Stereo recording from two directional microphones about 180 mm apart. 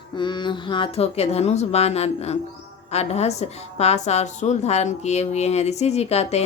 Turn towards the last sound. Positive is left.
turn(degrees=35)  # may be behind; listen again after turning